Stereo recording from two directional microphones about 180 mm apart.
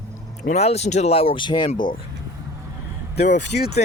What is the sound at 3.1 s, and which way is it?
Speech, 75° left (ahead or behind).